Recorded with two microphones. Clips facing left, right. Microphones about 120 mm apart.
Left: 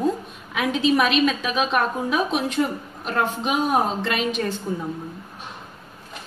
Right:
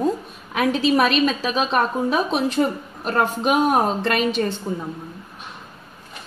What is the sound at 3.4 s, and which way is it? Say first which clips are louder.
Speech: right 4 dB; 50° right (ahead or behind).